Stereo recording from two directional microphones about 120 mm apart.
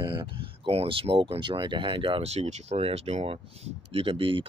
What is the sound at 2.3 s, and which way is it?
Speech, 65° right (ahead or behind).